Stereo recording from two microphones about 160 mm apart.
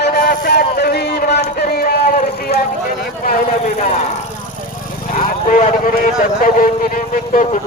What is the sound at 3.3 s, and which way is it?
Speech, 55° left (ahead or behind).